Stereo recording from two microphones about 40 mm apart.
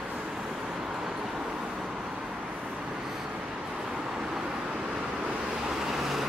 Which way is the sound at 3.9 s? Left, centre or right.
Centre.